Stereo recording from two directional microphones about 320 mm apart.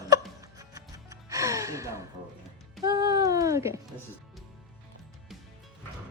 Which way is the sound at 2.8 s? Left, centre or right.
Centre.